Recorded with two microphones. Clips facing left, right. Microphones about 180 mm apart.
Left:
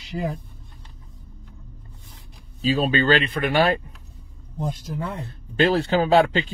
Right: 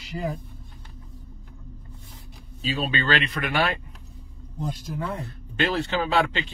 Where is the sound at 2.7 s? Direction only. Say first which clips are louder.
Left 5 dB; 40° left (ahead or behind).